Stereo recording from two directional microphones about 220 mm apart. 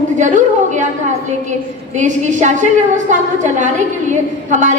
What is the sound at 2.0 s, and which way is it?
A woman's voice, 35° right (ahead or behind).